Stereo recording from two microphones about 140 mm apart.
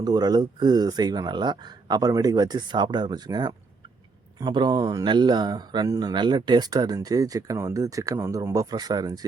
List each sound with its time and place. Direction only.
0.0 s speech: 30° right (ahead or behind)